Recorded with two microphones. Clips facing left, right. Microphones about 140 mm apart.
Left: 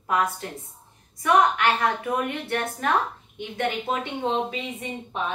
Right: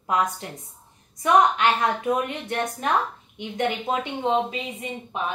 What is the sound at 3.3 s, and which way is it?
Speech, 20° right (ahead or behind).